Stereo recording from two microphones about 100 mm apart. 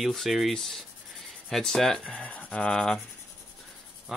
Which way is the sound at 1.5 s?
5° left (ahead or behind).